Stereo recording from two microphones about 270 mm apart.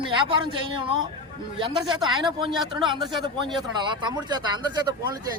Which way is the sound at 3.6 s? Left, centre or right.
Centre.